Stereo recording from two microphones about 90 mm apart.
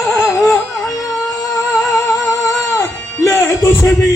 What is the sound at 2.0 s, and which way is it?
Music, 35° left (ahead or behind).